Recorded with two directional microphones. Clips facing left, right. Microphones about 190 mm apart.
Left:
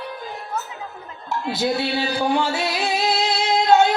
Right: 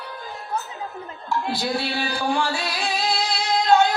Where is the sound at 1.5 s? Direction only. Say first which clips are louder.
Left 3 dB; 20° left (ahead or behind).